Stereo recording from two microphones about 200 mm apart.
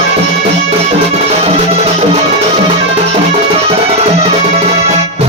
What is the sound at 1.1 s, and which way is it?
Music, 30° right (ahead or behind).